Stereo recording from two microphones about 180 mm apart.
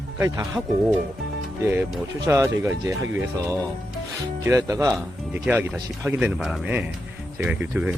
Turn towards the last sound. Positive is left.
turn(degrees=-5)  # may be behind; listen again after turning